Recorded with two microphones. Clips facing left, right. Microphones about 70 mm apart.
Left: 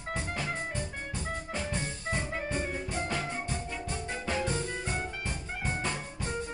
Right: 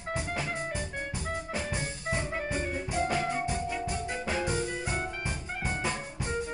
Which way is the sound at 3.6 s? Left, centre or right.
Centre.